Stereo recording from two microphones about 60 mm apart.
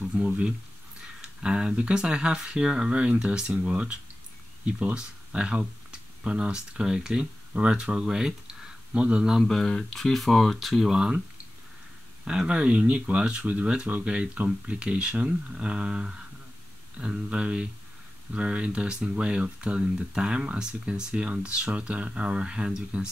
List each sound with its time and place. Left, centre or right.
0.2 s speech: right
9.5 s speech: centre
12.3 s speech: centre